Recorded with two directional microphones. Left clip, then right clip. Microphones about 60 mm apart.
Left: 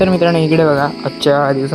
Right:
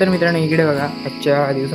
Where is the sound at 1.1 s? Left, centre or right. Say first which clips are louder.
Left 3 dB; left.